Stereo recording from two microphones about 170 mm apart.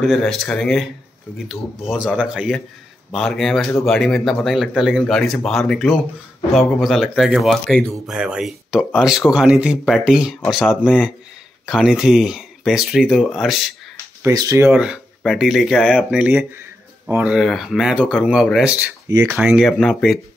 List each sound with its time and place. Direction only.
0.0 s speech: centre (ahead or behind)
14.2 s speech: 20° right (ahead or behind)
14.7 s speech: 5° right (ahead or behind)